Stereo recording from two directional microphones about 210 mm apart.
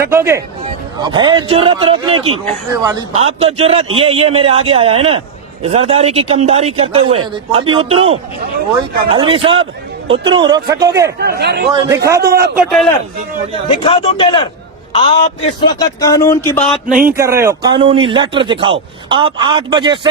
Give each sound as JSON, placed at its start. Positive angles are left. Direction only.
{"t": 0.0, "sound": "a man's voice", "side_deg": -10}
{"t": 3.2, "sound": "speech", "side_deg": -30}
{"t": 11.2, "sound": "speech", "side_deg": -50}
{"t": 12.0, "sound": "speech", "side_deg": -15}
{"t": 12.5, "sound": "a man's voice", "side_deg": 0}
{"t": 13.7, "sound": "speech", "side_deg": 25}
{"t": 15.8, "sound": "speech", "side_deg": 15}
{"t": 16.9, "sound": "speech", "side_deg": -40}
{"t": 17.2, "sound": "speech", "side_deg": -15}